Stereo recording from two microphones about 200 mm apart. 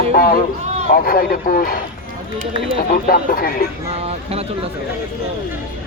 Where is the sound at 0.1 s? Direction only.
45° left (ahead or behind).